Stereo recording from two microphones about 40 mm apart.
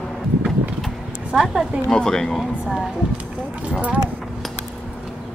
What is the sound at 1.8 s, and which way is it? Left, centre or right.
Speech, centre.